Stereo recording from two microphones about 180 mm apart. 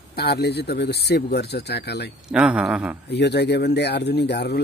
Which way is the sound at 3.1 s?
70° left (ahead or behind).